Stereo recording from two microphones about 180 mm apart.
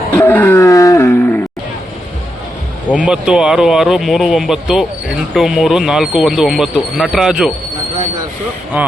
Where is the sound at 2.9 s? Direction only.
5° right (ahead or behind).